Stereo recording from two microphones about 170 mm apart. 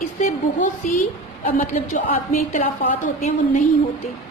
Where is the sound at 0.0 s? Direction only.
45° left (ahead or behind).